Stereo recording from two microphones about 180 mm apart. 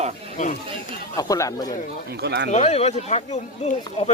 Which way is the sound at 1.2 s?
20° left (ahead or behind).